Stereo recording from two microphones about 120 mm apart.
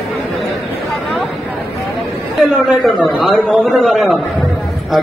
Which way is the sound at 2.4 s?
Centre (ahead or behind).